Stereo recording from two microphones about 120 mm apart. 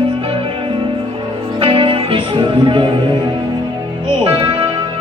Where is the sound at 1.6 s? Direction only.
50° right (ahead or behind).